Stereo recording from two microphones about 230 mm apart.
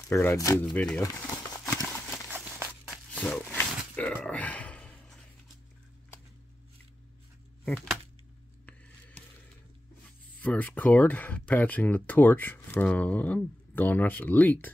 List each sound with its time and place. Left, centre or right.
0.1 s speech: centre
1.9 s horse: centre
2.3 s walk: centre
3.1 s a sound: centre
7.6 s a sound: centre
10.4 s speech: centre